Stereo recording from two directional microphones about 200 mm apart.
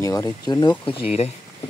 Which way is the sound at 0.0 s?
15° left (ahead or behind).